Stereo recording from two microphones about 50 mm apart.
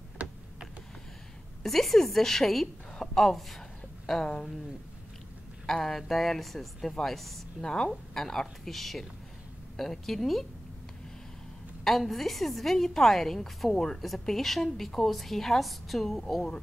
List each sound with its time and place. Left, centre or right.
1.6 s a woman's voice: centre
5.7 s a woman's voice: centre
7.6 s a woman's voice: centre
11.8 s a woman's voice: centre